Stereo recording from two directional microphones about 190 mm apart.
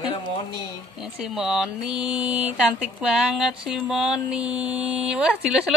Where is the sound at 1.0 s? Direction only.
Centre (ahead or behind).